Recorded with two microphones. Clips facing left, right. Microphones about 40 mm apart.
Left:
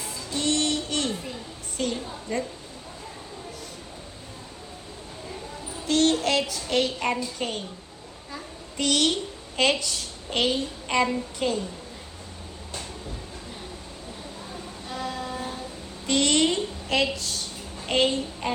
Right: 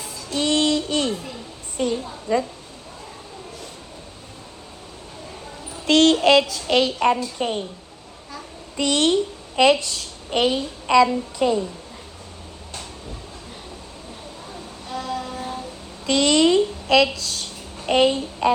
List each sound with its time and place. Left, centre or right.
0.0 s music: right
2.3 s a woman's voice: right
5.8 s child singing: right
6.7 s a child's voice: right
8.7 s a woman's voice: right
9.6 s a child's voice: right
14.8 s vehicle: left
16.0 s a sound: right